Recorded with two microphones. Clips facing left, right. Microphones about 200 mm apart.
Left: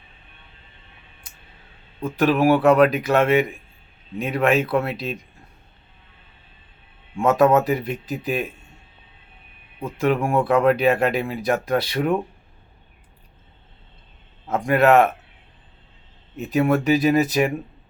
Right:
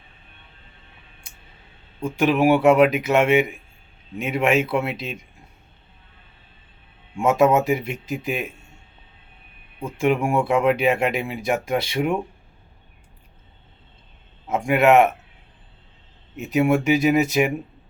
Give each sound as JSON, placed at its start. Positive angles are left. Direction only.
{"t": 2.0, "sound": "speech", "side_deg": -15}
{"t": 7.2, "sound": "speech", "side_deg": -15}
{"t": 10.0, "sound": "speech", "side_deg": -15}
{"t": 14.7, "sound": "speech", "side_deg": -15}
{"t": 16.4, "sound": "speech", "side_deg": -15}